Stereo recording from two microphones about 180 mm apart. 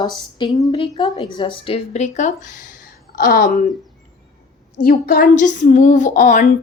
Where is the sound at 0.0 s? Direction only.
25° left (ahead or behind); by 3.6 s 50° left (ahead or behind).